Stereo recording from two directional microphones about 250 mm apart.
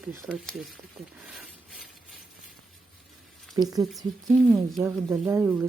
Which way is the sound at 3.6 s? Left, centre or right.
Centre.